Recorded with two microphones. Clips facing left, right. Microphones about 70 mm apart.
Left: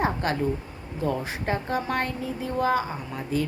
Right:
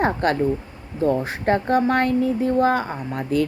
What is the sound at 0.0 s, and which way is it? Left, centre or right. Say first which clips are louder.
Speech: right 5 dB; right.